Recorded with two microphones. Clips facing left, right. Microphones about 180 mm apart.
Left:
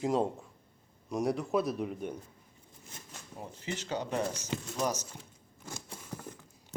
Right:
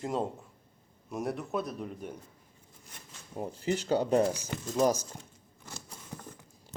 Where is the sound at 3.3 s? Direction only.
40° right (ahead or behind).